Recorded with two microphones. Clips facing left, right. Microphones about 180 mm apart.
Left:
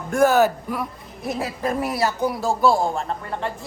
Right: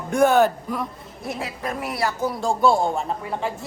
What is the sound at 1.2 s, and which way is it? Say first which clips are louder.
Speech: left 4 dB; 30° left (ahead or behind).